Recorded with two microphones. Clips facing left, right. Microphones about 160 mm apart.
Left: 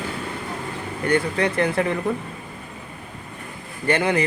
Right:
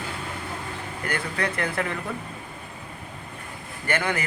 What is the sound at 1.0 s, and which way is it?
Speech, 30° left (ahead or behind).